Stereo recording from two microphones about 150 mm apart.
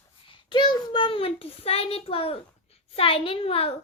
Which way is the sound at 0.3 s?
30° left (ahead or behind).